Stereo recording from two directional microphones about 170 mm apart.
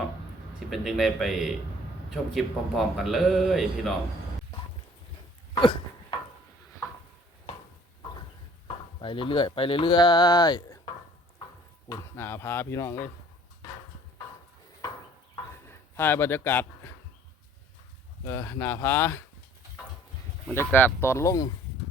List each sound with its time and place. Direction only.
0.7 s a man's voice: centre (ahead or behind)
5.5 s a sound: 30° left (ahead or behind)
8.6 s speech: 30° left (ahead or behind)
11.9 s speech: 15° left (ahead or behind)
16.0 s speech: 10° left (ahead or behind)
18.3 s speech: 15° left (ahead or behind)
20.5 s speech: 10° left (ahead or behind)